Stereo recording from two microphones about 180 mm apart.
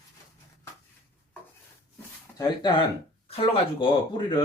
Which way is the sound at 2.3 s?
25° left (ahead or behind).